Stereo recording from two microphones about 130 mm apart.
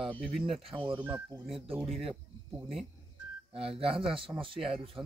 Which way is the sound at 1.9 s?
50° right (ahead or behind).